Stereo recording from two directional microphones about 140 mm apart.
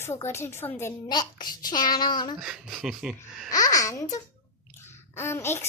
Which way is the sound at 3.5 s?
25° left (ahead or behind).